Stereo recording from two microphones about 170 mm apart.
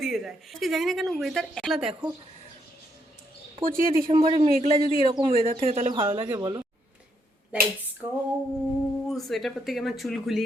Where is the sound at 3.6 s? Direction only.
55° right (ahead or behind).